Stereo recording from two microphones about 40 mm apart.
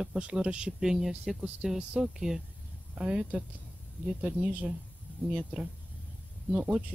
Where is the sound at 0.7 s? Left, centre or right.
Centre.